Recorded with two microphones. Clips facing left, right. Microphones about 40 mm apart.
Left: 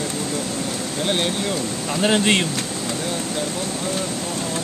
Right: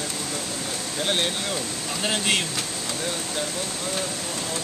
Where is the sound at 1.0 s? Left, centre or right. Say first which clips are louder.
Left 3 dB; centre.